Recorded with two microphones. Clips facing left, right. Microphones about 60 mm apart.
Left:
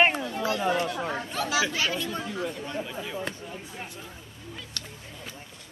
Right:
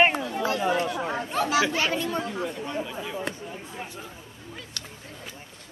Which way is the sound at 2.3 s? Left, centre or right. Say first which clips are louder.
Right 2 dB; centre.